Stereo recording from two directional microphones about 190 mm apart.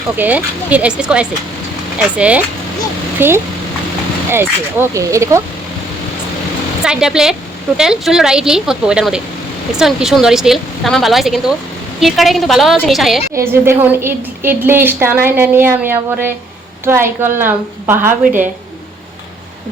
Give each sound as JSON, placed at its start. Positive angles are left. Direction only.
{"t": 0.2, "sound": "a woman's voice", "side_deg": -10}
{"t": 6.8, "sound": "speech", "side_deg": -5}
{"t": 13.3, "sound": "a woman's voice", "side_deg": -15}